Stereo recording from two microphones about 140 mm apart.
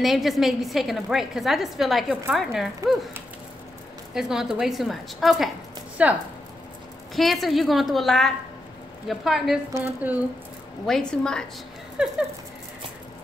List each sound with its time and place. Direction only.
0.0 s a woman's voice: centre (ahead or behind)
4.1 s a woman's voice: 5° right (ahead or behind)
7.2 s a woman's voice: centre (ahead or behind)
9.8 s speech: 20° right (ahead or behind)
10.9 s a woman's voice: 5° left (ahead or behind)
12.0 s a woman's voice: 5° right (ahead or behind)